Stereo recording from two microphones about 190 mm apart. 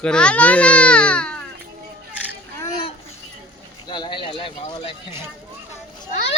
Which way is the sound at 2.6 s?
25° left (ahead or behind).